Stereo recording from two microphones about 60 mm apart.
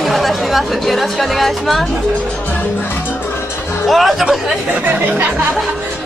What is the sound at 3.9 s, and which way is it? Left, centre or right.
Speech, centre.